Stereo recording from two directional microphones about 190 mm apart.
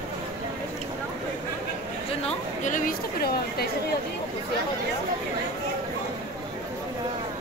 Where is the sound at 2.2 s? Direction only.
40° left (ahead or behind).